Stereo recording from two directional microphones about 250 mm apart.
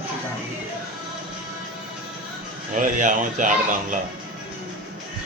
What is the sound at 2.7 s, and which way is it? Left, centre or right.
Speech, right.